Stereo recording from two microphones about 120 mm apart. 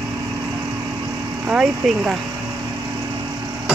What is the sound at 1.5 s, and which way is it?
Speech, 5° right (ahead or behind).